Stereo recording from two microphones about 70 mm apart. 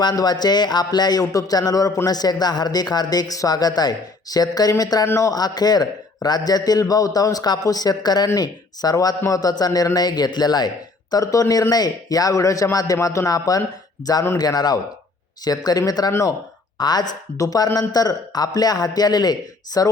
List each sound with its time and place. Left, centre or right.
0.0 s speech: left
5.0 s speech: left
5.3 s speech: left
11.1 s speech: left
14.3 s a woman's voice: left
17.3 s speech: left